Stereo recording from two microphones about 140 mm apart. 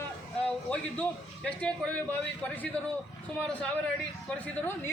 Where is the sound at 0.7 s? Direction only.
10° left (ahead or behind).